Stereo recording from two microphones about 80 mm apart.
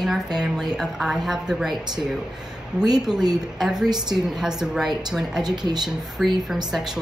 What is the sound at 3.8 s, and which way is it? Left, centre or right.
Speech, right.